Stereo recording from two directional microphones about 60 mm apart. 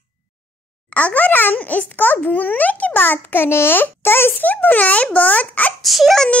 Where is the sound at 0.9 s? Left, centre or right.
Left.